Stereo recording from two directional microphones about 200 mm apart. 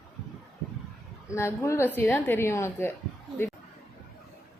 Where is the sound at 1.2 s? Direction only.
15° left (ahead or behind).